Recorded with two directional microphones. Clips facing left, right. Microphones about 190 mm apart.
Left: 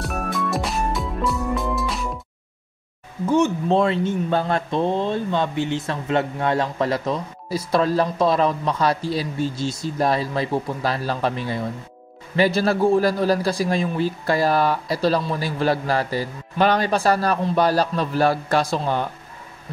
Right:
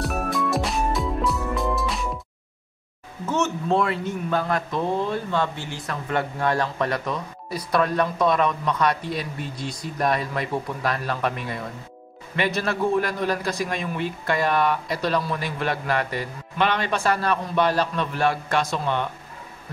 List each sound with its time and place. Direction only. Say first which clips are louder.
0.0 s music: right 1 dB; centre (ahead or behind)
3.3 s a man's voice: left 5 dB; 15° left (ahead or behind); by 19.0 s 35° left (ahead or behind)